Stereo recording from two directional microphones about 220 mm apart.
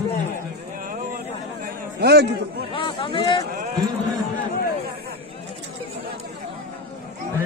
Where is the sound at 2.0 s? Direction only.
45° right (ahead or behind).